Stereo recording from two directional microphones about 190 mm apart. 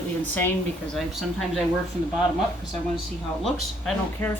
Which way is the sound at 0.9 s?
Centre (ahead or behind).